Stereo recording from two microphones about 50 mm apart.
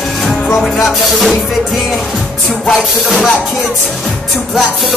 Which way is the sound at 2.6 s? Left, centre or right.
Centre.